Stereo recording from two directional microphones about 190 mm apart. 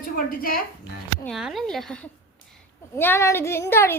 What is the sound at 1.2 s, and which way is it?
A woman's voice, centre (ahead or behind).